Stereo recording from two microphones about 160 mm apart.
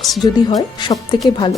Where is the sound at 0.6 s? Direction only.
25° left (ahead or behind).